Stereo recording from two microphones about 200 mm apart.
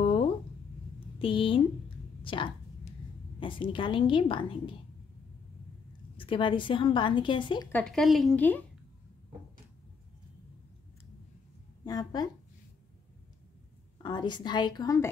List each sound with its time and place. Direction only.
0.0 s a sound: 25° left (ahead or behind)
1.2 s a woman's voice: 25° left (ahead or behind)
2.2 s a sound: 25° left (ahead or behind)
3.3 s a woman's voice: 25° left (ahead or behind)
6.1 s a woman's voice: 25° left (ahead or behind)
7.7 s a woman's voice: 5° left (ahead or behind)
11.8 s a woman's voice: 20° left (ahead or behind)
14.0 s a woman's voice: 20° left (ahead or behind)